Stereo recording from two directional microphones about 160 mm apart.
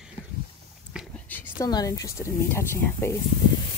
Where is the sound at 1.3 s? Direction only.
10° left (ahead or behind).